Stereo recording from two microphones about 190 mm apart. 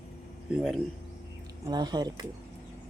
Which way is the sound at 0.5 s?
Centre (ahead or behind).